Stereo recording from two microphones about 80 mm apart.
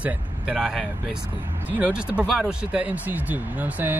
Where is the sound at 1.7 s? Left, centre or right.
Centre.